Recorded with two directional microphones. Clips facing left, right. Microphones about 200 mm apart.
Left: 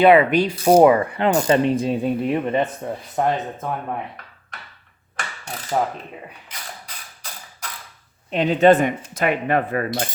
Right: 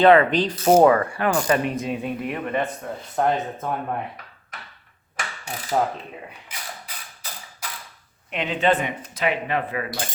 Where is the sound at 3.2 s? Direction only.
5° left (ahead or behind).